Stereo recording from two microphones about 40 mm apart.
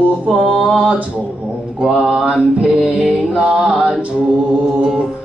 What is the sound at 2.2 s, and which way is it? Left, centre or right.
Music, right.